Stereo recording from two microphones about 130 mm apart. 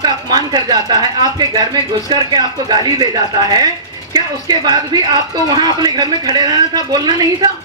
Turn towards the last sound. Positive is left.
turn(degrees=-30)  # may be behind; listen again after turning